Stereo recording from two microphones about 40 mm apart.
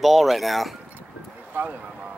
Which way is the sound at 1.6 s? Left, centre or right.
Right.